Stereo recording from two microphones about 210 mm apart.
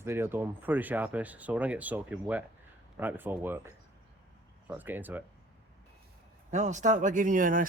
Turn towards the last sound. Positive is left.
turn(degrees=-40)  # may be behind; listen again after turning